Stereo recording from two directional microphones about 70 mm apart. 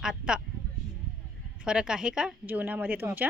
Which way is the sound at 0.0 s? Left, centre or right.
Centre.